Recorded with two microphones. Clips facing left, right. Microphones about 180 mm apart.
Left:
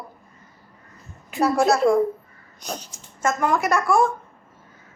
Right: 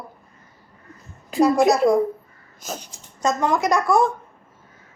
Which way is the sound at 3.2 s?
15° right (ahead or behind).